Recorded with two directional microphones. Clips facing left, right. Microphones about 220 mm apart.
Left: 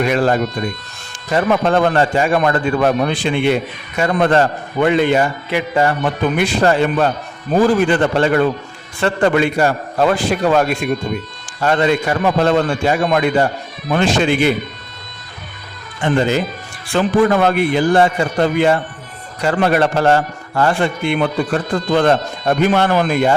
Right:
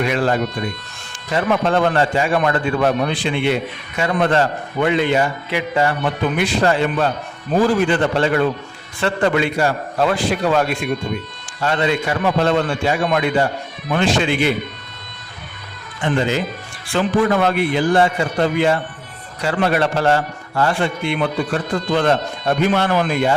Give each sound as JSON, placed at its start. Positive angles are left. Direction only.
{"t": 0.0, "sound": "a man's voice", "side_deg": 45}
{"t": 16.0, "sound": "a man's voice", "side_deg": 45}